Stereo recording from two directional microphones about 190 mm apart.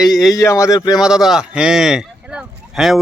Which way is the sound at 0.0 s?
Centre (ahead or behind).